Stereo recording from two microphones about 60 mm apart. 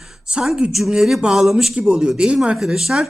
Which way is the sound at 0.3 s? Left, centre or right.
Centre.